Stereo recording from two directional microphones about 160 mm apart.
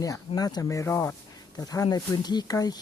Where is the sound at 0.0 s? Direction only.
20° left (ahead or behind).